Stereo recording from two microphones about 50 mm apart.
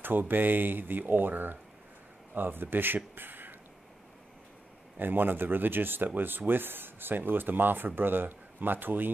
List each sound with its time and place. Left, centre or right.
0.0 s speech: right
4.9 s speech: right